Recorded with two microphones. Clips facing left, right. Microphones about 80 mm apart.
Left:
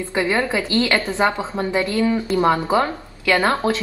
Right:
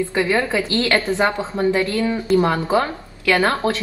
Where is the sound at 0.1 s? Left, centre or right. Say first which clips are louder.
Left 3 dB; left.